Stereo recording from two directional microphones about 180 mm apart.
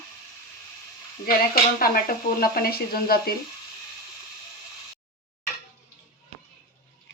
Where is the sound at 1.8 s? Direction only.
55° left (ahead or behind).